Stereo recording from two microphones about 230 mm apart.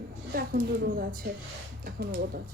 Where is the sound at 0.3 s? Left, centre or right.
Right.